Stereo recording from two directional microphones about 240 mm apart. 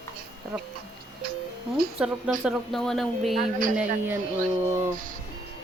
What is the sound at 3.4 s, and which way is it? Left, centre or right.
Speech, right.